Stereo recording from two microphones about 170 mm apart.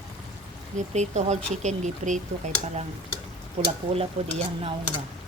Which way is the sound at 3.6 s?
35° right (ahead or behind).